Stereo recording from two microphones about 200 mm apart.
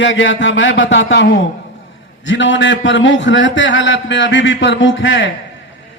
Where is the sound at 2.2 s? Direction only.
65° left (ahead or behind).